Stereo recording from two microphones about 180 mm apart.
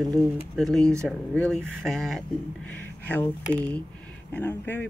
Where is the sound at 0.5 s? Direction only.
Centre (ahead or behind).